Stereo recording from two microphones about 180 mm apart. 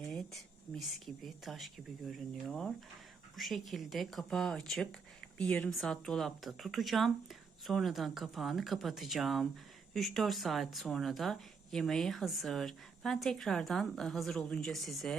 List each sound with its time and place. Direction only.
0.1 s speech: centre (ahead or behind)